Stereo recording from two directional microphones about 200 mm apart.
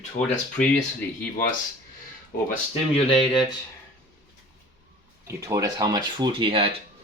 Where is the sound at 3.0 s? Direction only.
25° left (ahead or behind).